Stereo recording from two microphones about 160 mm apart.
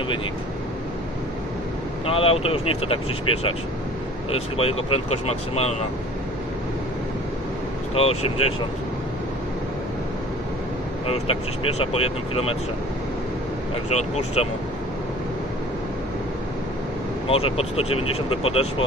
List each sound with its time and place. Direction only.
2.0 s speech: 35° left (ahead or behind)
7.9 s speech: 40° left (ahead or behind)
11.1 s speech: 35° left (ahead or behind)
13.9 s speech: 40° left (ahead or behind)
17.3 s speech: 35° left (ahead or behind)